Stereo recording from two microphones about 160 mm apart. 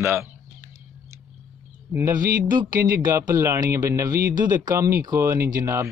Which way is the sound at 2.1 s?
60° right (ahead or behind).